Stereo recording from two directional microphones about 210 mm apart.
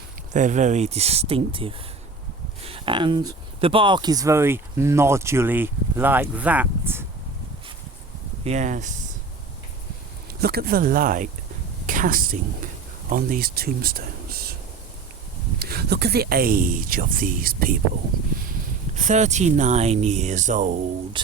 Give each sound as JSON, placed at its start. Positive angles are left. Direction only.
{"t": 0.3, "sound": "speech", "side_deg": -35}
{"t": 8.4, "sound": "speech", "side_deg": -35}
{"t": 10.4, "sound": "speech", "side_deg": -45}
{"t": 15.5, "sound": "speech", "side_deg": -50}
{"t": 18.9, "sound": "speech", "side_deg": -35}